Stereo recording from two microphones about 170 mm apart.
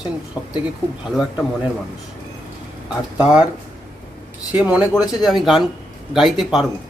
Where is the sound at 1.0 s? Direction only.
Centre (ahead or behind).